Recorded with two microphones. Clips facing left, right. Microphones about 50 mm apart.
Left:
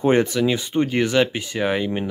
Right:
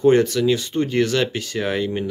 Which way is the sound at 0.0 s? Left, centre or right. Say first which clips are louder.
Right 2 dB; left.